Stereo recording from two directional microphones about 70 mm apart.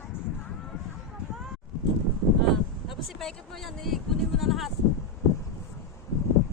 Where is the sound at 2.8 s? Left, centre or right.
Centre.